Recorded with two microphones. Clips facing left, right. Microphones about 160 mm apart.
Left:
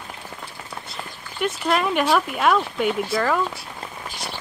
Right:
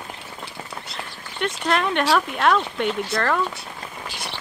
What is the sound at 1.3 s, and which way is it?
Speech, 5° left (ahead or behind).